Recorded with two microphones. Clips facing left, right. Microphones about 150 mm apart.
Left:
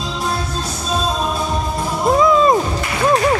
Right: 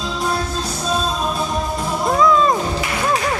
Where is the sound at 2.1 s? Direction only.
15° left (ahead or behind).